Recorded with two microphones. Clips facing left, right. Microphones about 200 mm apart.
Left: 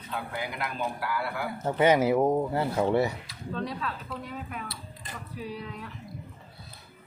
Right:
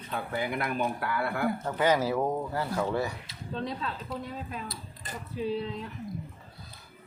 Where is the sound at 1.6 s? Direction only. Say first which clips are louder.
Left 6 dB; 20° left (ahead or behind).